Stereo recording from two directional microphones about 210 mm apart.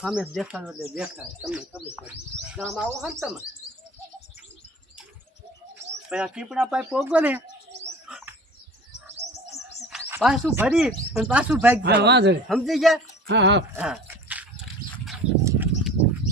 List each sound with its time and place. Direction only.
0.0 s speech: 5° right (ahead or behind)
6.1 s speech: 5° right (ahead or behind)
8.0 s bird: 5° right (ahead or behind)
9.2 s bird: 30° right (ahead or behind)
9.9 s speech: centre (ahead or behind)
11.8 s speech: 50° right (ahead or behind)
12.5 s speech: centre (ahead or behind)
13.2 s speech: 55° right (ahead or behind)
13.7 s a sound: 5° right (ahead or behind)
15.4 s a sound: 10° right (ahead or behind)